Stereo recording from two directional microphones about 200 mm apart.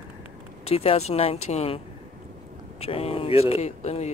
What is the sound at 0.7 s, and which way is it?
Speech, 30° left (ahead or behind).